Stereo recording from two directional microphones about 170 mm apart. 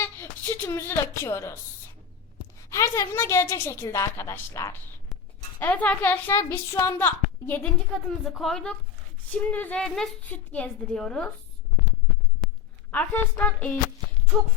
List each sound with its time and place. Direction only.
0.0 s speech: 15° left (ahead or behind)
2.6 s a woman's voice: 15° left (ahead or behind)
12.9 s a woman's voice: 10° left (ahead or behind)